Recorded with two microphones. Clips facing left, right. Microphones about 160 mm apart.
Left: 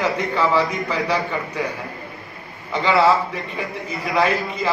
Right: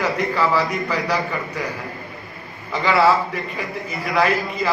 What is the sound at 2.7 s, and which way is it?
Speech, centre (ahead or behind).